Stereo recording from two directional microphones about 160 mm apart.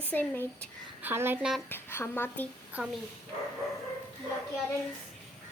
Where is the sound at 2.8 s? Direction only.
10° right (ahead or behind).